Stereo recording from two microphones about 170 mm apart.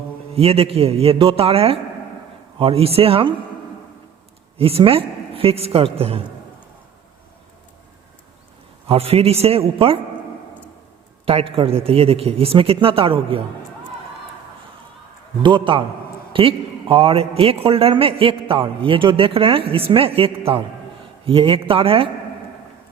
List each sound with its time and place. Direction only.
0.3 s a man's voice: 35° right (ahead or behind)
4.5 s a man's voice: 35° right (ahead or behind)
8.9 s a man's voice: 35° right (ahead or behind)
11.3 s a man's voice: 35° right (ahead or behind)
15.4 s a man's voice: 30° right (ahead or behind)